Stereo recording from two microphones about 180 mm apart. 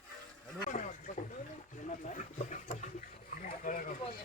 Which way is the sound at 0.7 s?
45° left (ahead or behind).